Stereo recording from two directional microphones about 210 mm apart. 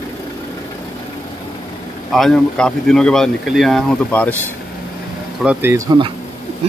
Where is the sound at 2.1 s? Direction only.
Centre (ahead or behind).